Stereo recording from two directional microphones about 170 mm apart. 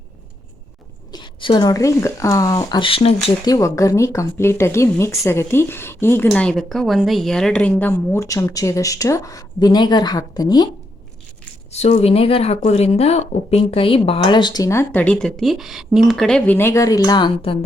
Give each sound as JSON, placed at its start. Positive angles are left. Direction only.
{"t": 1.1, "sound": "speech", "side_deg": 30}
{"t": 3.4, "sound": "a woman's voice", "side_deg": 20}
{"t": 11.7, "sound": "speech", "side_deg": 40}
{"t": 16.6, "sound": "speech", "side_deg": 15}